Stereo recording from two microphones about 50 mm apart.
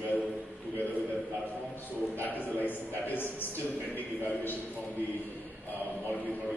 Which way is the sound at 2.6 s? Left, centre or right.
Left.